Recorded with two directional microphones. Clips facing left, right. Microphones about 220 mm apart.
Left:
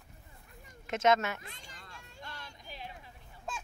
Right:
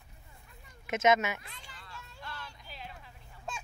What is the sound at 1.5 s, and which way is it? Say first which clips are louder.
Children playing: even; 45° left (ahead or behind).